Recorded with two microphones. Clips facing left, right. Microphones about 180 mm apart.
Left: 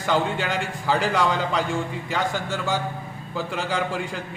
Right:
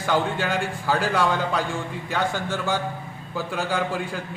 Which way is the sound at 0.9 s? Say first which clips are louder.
Left 1 dB; 5° right (ahead or behind).